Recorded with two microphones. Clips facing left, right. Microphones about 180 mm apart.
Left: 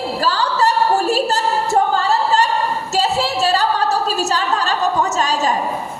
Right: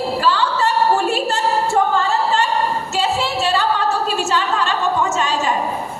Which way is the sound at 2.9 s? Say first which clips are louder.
Left 3 dB; 40° left (ahead or behind).